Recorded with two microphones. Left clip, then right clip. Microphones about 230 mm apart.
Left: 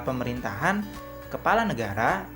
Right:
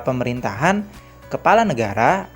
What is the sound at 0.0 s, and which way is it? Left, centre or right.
Speech, right.